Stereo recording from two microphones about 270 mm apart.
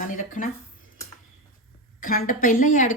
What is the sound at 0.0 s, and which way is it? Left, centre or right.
Speech, left.